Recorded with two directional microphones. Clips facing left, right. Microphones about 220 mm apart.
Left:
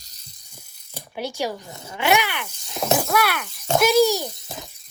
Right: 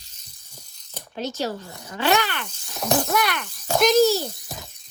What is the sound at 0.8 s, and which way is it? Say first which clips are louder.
Zipper: left 1 dB; 10° left (ahead or behind).